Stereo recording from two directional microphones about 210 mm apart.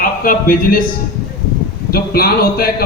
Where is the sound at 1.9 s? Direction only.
45° left (ahead or behind).